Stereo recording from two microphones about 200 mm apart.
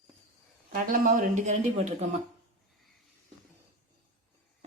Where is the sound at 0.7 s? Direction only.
45° right (ahead or behind).